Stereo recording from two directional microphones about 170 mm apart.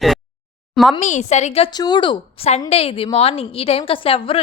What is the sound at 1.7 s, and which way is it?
A woman's voice, 25° left (ahead or behind).